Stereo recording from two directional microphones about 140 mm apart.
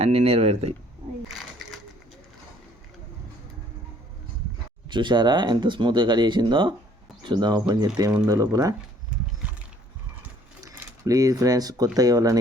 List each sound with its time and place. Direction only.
0.0 s speech: 50° right (ahead or behind)
1.3 s sewing machine: centre (ahead or behind)
4.9 s speech: 35° right (ahead or behind)
10.6 s speech: 25° right (ahead or behind)